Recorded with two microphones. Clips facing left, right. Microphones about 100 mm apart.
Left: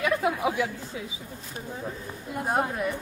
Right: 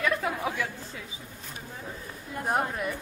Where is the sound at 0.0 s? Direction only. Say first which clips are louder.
Left 3 dB; 15° left (ahead or behind).